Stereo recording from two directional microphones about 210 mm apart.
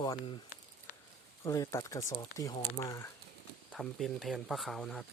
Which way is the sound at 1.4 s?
15° left (ahead or behind).